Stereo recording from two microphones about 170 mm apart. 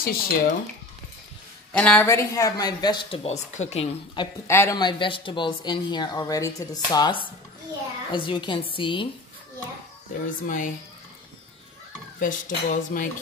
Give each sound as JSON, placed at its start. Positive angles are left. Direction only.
{"t": 0.0, "sound": "speech", "side_deg": 60}
{"t": 1.7, "sound": "speech", "side_deg": 5}
{"t": 2.1, "sound": "speech", "side_deg": 20}
{"t": 4.5, "sound": "speech", "side_deg": 15}
{"t": 10.4, "sound": "speech", "side_deg": 50}
{"t": 12.2, "sound": "speech", "side_deg": 50}